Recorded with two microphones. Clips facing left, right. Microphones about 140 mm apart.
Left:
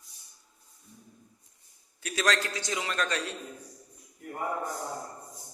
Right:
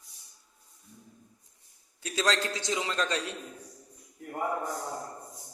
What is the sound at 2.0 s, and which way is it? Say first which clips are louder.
A man's voice: even; 25° right (ahead or behind).